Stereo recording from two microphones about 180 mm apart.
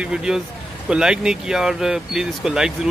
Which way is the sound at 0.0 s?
5° right (ahead or behind).